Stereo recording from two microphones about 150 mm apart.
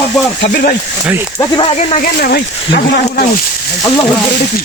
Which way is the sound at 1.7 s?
50° left (ahead or behind).